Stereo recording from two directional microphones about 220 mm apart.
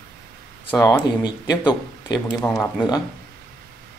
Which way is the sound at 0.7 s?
15° left (ahead or behind).